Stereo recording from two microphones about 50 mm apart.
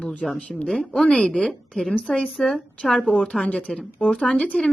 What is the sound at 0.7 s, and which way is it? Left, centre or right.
Speech, centre.